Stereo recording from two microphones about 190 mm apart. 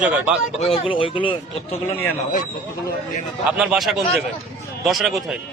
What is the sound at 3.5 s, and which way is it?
Speech, 5° right (ahead or behind).